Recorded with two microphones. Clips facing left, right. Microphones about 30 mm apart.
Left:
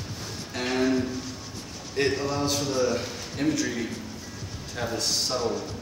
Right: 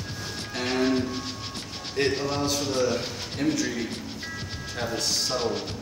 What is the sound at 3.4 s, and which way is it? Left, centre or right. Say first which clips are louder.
Speech: even; centre.